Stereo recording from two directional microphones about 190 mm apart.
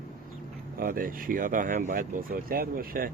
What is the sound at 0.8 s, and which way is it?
Speech, 45° right (ahead or behind).